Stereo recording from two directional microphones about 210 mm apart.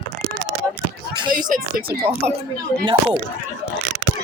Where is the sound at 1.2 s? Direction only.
20° right (ahead or behind).